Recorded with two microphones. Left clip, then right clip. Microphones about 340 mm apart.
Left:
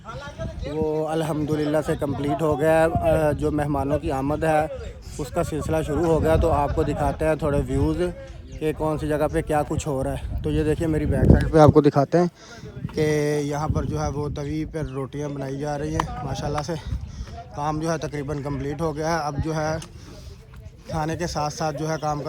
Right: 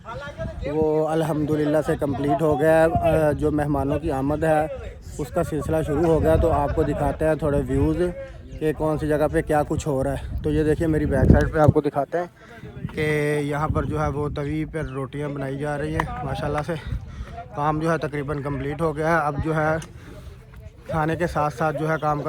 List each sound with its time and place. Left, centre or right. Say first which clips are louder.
0.1 s a sound: right 2 dB; right
0.8 s speech: right 3 dB; centre
11.6 s speech: left 6 dB; centre
13.0 s speech: left 1 dB; centre
20.9 s speech: right 4 dB; centre